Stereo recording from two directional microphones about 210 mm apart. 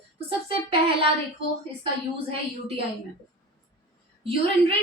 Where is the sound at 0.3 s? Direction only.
25° right (ahead or behind).